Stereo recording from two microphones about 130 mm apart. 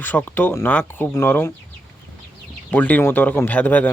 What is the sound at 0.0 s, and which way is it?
Speech, 15° left (ahead or behind).